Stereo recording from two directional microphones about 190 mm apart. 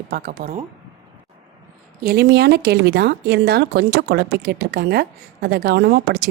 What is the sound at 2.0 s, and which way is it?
Speech, 55° right (ahead or behind).